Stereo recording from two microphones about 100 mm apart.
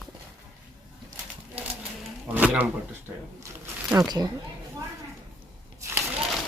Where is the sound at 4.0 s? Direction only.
40° right (ahead or behind).